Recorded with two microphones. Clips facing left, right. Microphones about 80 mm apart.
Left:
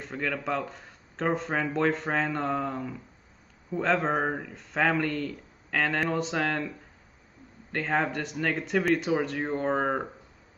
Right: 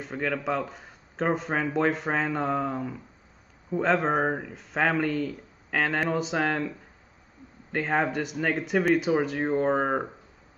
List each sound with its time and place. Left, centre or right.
0.0 s speech: centre
7.7 s speech: centre